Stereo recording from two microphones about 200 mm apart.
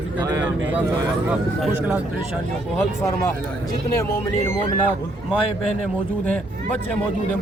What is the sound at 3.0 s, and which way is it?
Speech, 15° left (ahead or behind).